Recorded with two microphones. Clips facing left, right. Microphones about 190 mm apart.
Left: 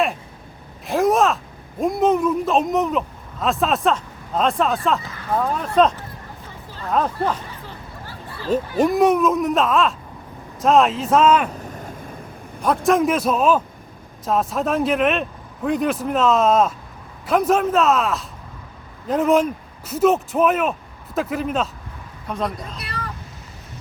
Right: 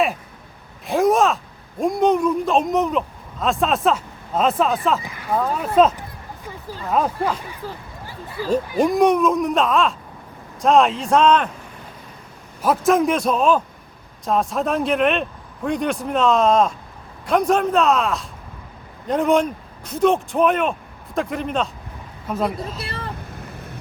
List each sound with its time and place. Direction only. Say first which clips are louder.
0.9 s groan: right 1 dB; centre (ahead or behind)
1.8 s speech: even; centre (ahead or behind)
5.0 s speech: even; 15° right (ahead or behind)
8.0 s a sound: right 8 dB; 15° right (ahead or behind)
8.8 s speech: even; centre (ahead or behind)
11.7 s a sound: left 6 dB; 45° left (ahead or behind)
12.6 s speech: even; centre (ahead or behind)
22.8 s speech: right 2 dB; 25° right (ahead or behind)